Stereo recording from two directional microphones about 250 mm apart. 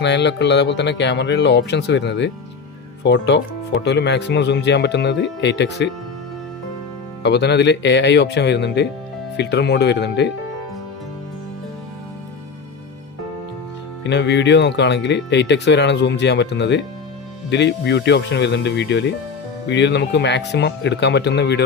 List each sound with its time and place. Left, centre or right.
0.0 s speech: left
7.2 s speech: left
14.0 s speech: left